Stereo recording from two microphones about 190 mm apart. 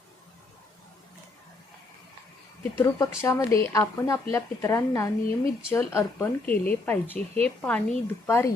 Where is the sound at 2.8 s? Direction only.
15° left (ahead or behind).